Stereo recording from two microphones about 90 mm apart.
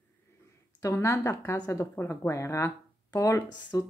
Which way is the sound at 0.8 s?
35° left (ahead or behind).